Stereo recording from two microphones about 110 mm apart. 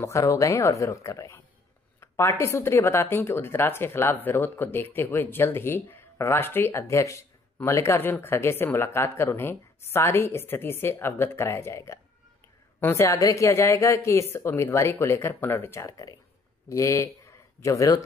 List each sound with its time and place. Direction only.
0.0 s speech: 30° left (ahead or behind)